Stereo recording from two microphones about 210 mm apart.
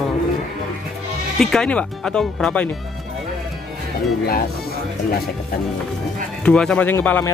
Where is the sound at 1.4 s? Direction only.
5° left (ahead or behind).